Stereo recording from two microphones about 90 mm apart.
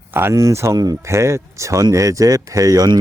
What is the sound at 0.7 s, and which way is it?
Speech, 45° right (ahead or behind).